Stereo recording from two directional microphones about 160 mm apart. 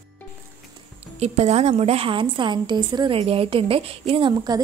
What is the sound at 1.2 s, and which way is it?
A woman's voice, 40° right (ahead or behind).